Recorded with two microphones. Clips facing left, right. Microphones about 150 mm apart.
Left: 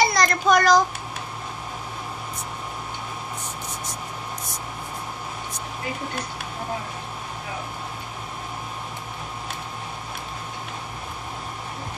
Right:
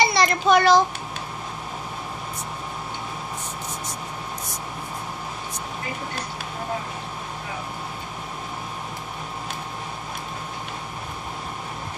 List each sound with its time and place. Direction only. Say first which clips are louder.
0.0 s a child's voice: even; 5° right (ahead or behind)